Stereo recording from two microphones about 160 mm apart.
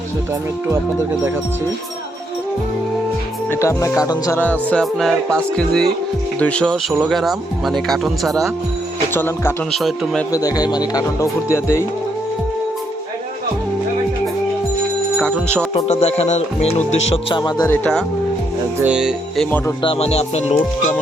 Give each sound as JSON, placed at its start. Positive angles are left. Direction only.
{"t": 3.5, "sound": "music", "side_deg": 15}
{"t": 6.4, "sound": "speech", "side_deg": 5}
{"t": 9.1, "sound": "music", "side_deg": 15}
{"t": 9.7, "sound": "speech", "side_deg": 0}
{"t": 10.3, "sound": "speech", "side_deg": 25}
{"t": 11.0, "sound": "music", "side_deg": 15}
{"t": 15.2, "sound": "music", "side_deg": 5}
{"t": 15.7, "sound": "speech", "side_deg": 40}
{"t": 17.3, "sound": "speech", "side_deg": 25}
{"t": 17.7, "sound": "music", "side_deg": 5}
{"t": 18.8, "sound": "speech", "side_deg": -5}
{"t": 19.5, "sound": "music", "side_deg": 10}
{"t": 19.8, "sound": "speech", "side_deg": 35}